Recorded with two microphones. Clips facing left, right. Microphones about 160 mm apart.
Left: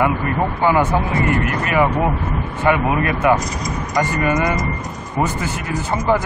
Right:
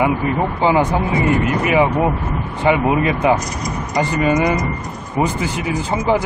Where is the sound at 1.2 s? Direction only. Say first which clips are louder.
Right 3 dB; 20° right (ahead or behind).